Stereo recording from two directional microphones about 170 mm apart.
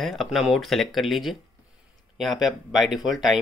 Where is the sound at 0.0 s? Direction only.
Centre (ahead or behind).